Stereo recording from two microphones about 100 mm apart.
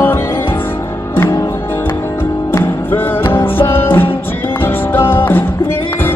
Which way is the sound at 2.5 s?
20° left (ahead or behind).